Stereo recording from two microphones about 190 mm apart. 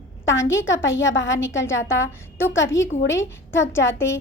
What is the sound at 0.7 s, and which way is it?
Speech, 85° left.